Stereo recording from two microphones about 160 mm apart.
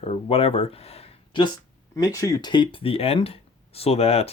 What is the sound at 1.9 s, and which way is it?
Speech, 20° left (ahead or behind).